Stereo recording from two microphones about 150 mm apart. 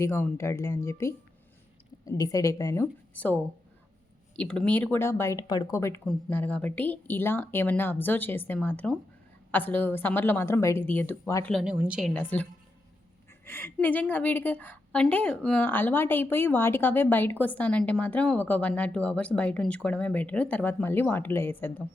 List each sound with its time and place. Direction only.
0.0 s speech: 15° left (ahead or behind)
3.1 s a woman's voice: 10° left (ahead or behind)
4.4 s a woman's voice: 5° left (ahead or behind)
6.1 s a woman's voice: 5° left (ahead or behind)
11.6 s a woman's voice: 5° right (ahead or behind)
12.1 s a woman's voice: 10° left (ahead or behind)